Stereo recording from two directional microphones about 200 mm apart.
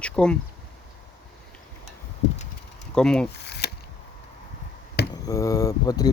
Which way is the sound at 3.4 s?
55° left (ahead or behind).